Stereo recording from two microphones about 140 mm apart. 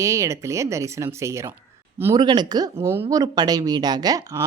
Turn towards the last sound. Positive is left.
turn(degrees=-25)  # may be behind; listen again after turning